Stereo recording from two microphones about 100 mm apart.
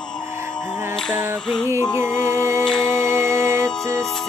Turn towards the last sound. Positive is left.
turn(degrees=-25)  # may be behind; listen again after turning